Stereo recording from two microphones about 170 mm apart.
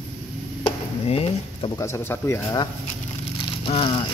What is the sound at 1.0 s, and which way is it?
Speech, 35° left (ahead or behind).